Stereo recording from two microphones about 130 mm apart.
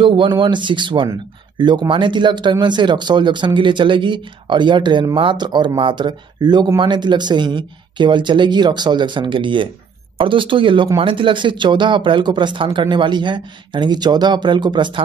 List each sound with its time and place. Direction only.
0.0 s speech: 40° right (ahead or behind)